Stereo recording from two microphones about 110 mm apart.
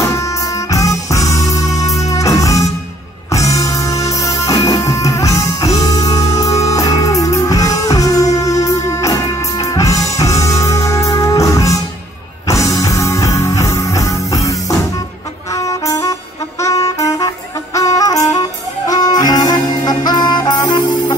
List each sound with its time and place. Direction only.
0.1 s music: 30° left (ahead or behind)